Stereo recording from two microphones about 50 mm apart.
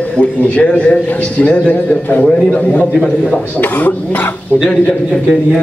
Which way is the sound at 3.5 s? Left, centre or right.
Left.